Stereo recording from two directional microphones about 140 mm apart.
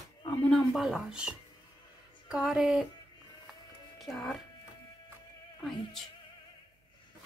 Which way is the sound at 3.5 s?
Centre (ahead or behind).